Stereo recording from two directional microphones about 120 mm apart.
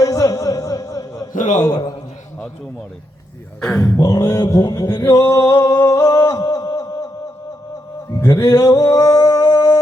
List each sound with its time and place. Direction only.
0.0 s music: 30° left (ahead or behind)
1.3 s a man's voice: 90° left
3.6 s speech: 5° left (ahead or behind)
4.0 s male singing: 30° left (ahead or behind)
8.2 s speech: 25° left (ahead or behind)